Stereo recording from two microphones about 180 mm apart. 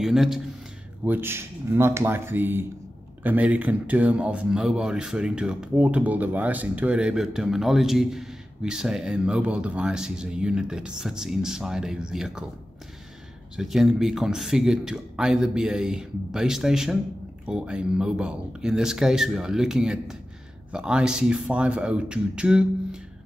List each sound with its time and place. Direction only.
0.0 s speech: centre (ahead or behind)
13.6 s speech: centre (ahead or behind)